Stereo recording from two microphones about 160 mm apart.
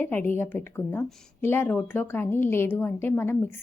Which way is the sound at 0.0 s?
10° left (ahead or behind).